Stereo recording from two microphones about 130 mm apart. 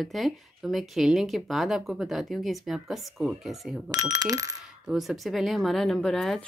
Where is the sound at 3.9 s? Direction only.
30° right (ahead or behind).